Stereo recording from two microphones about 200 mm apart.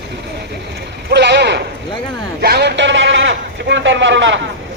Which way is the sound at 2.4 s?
55° right (ahead or behind).